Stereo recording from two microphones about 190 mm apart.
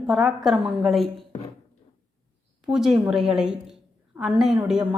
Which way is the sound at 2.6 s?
Centre (ahead or behind).